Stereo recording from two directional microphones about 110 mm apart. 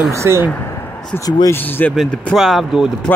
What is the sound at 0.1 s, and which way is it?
Speech, 25° right (ahead or behind).